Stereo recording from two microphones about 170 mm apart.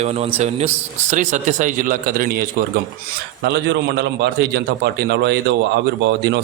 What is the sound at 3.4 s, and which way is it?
A man's voice, 80° right.